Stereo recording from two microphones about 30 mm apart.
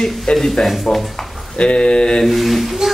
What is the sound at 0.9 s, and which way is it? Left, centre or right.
Speech, left.